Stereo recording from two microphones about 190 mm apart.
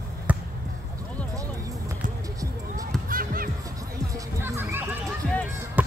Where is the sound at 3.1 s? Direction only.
50° right (ahead or behind).